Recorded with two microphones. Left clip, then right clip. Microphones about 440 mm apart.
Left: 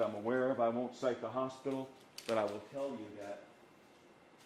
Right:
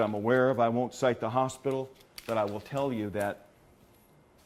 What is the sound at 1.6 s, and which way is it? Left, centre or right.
Speech, right.